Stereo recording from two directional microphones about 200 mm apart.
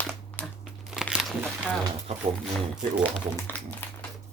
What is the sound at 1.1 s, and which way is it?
Crunch, 5° right (ahead or behind).